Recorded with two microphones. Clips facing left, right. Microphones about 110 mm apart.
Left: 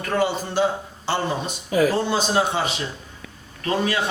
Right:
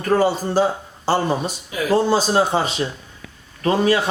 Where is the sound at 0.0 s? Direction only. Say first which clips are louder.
Right 5 dB; 40° right (ahead or behind).